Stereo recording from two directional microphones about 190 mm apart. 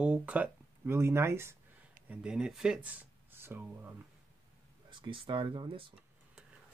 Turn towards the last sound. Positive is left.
turn(degrees=-25)  # may be behind; listen again after turning